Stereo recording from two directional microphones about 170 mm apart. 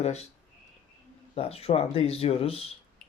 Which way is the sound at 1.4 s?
35° left (ahead or behind).